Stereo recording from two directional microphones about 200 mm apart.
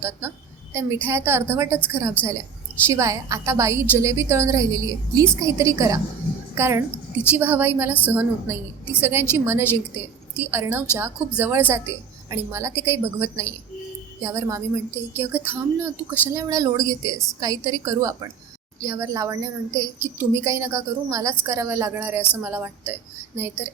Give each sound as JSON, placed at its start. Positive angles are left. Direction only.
{"t": 0.0, "sound": "a woman's voice", "side_deg": -15}